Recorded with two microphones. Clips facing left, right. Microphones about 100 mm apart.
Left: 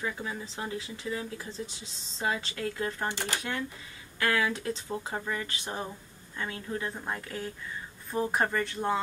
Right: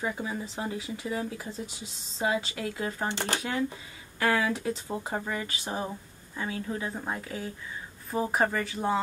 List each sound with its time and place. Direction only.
0.0 s speech: 20° right (ahead or behind)
0.6 s speech: 10° right (ahead or behind)